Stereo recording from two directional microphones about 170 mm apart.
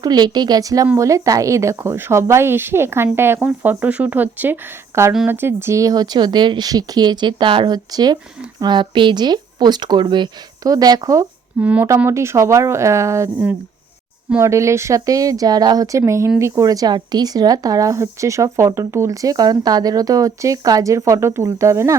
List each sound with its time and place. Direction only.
0.0 s a woman's voice: 25° right (ahead or behind)
11.6 s a woman's voice: 10° right (ahead or behind)